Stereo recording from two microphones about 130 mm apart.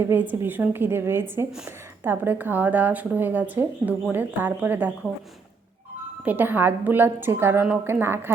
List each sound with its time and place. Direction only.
0.0 s a woman's voice: 15° right (ahead or behind)
6.2 s a woman's voice: 15° right (ahead or behind)